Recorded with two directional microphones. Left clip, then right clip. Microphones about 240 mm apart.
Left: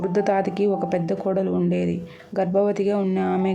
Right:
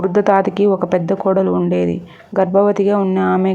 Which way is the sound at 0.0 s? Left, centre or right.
Centre.